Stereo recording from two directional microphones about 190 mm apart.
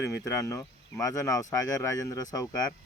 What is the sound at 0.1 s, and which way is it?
Speech, 15° left (ahead or behind).